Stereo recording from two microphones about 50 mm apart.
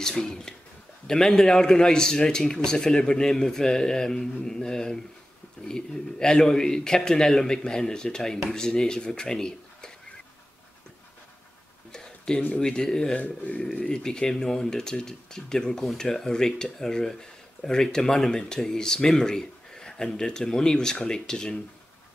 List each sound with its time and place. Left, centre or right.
0.0 s speech: centre
11.9 s a sound: centre
12.5 s speech: centre
13.2 s speech: left; by 21.5 s centre